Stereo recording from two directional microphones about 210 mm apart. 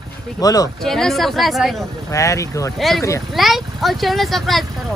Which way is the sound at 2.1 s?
15° left (ahead or behind).